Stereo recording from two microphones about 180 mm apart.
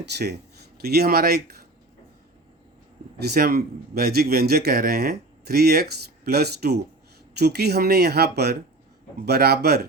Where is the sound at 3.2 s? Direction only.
60° right (ahead or behind).